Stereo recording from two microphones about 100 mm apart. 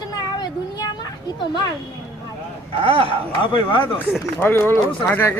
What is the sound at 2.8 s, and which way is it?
Speech, 70° right (ahead or behind).